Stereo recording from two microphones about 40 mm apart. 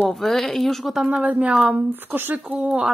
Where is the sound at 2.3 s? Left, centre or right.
Right.